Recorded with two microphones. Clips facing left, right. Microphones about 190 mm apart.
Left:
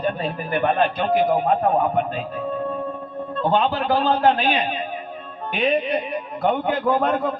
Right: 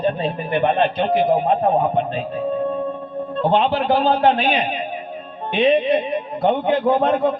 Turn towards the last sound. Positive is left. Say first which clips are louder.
# right 3 dB
turn(degrees=-20)  # may be behind; listen again after turning